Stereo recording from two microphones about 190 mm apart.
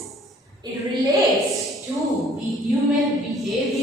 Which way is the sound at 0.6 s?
20° right (ahead or behind).